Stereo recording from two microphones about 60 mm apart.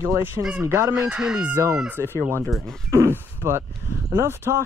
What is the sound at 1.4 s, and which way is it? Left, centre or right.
Speech, right.